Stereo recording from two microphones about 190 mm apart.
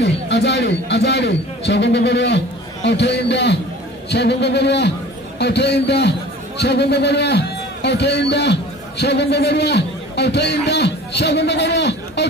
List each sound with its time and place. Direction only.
0.0 s a man's voice: 65° left (ahead or behind)